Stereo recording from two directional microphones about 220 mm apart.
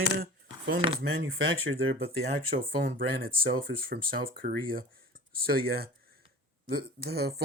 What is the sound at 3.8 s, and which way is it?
Speech, 45° right (ahead or behind).